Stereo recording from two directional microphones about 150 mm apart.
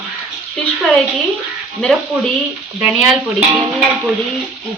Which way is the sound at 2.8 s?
5° right (ahead or behind).